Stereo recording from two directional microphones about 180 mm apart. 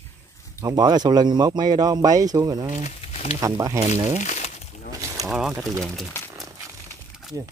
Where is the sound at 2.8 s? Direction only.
35° left (ahead or behind).